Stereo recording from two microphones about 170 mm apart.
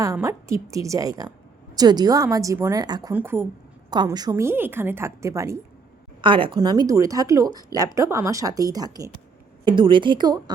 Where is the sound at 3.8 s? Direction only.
25° right (ahead or behind).